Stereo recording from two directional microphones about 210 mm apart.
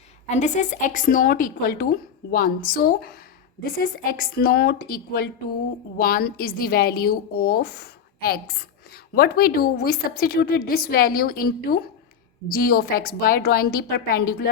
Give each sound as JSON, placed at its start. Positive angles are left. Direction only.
{"t": 0.3, "sound": "a woman's voice", "side_deg": 35}